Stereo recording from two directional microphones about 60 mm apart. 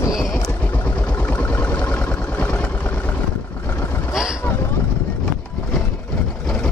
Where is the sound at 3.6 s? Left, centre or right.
Left.